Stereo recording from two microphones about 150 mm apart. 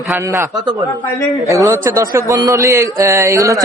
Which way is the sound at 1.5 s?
20° right (ahead or behind).